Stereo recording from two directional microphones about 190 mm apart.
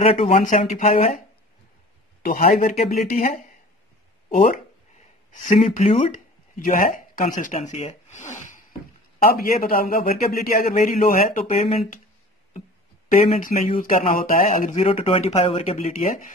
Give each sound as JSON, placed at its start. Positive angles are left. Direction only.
{"t": 0.0, "sound": "speech", "side_deg": 35}
{"t": 2.2, "sound": "a man's voice", "side_deg": 45}
{"t": 10.7, "sound": "a man's voice", "side_deg": 40}
{"t": 13.3, "sound": "speech", "side_deg": 45}